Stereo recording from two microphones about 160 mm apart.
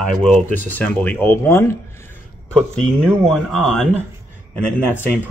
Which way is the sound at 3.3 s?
Centre (ahead or behind).